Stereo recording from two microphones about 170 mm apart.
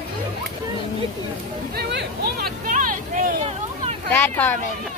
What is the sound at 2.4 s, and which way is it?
Vehicle, 50° right (ahead or behind).